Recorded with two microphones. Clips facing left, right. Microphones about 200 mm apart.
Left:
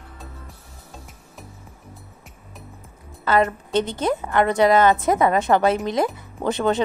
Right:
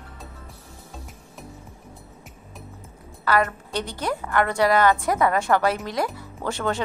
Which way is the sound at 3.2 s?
20° left (ahead or behind).